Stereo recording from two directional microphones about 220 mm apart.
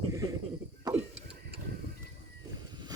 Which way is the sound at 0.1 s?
15° right (ahead or behind).